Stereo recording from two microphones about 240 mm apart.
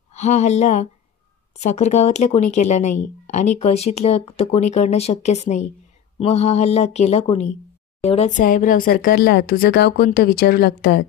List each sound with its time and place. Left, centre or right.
0.1 s speech: left